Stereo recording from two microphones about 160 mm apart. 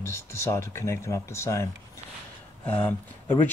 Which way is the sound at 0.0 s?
15° left (ahead or behind).